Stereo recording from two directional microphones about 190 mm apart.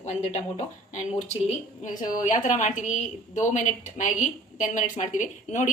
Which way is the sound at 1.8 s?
45° left (ahead or behind).